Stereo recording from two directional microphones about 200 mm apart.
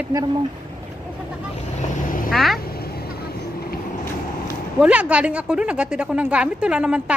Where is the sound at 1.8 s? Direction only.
40° left (ahead or behind).